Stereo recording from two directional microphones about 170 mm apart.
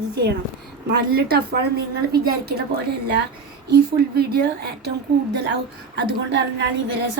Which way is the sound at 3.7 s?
70° right (ahead or behind).